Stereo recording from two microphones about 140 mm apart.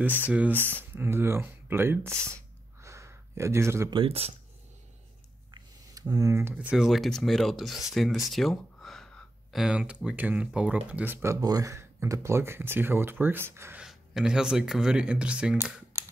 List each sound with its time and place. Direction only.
0.9 s speech: 15° right (ahead or behind)
2.8 s a sound: 20° right (ahead or behind)
3.9 s speech: 45° right (ahead or behind)
5.5 s speech: 25° right (ahead or behind)
11.3 s speech: 25° right (ahead or behind)
13.8 s speech: 5° right (ahead or behind)
15.9 s a sound: 20° right (ahead or behind)